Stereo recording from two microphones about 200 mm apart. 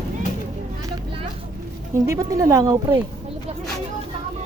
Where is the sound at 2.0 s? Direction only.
15° right (ahead or behind).